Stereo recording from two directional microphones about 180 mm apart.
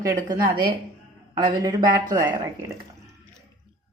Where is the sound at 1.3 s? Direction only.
20° right (ahead or behind).